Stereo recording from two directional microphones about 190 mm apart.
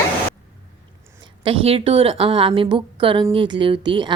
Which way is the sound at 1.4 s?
30° right (ahead or behind).